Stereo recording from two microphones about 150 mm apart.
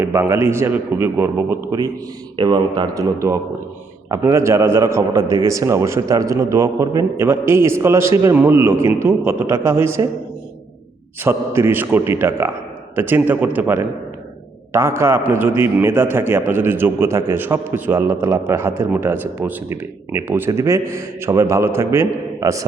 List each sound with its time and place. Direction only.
0.0 s a man's voice: 15° right (ahead or behind)
11.2 s a man's voice: 15° right (ahead or behind)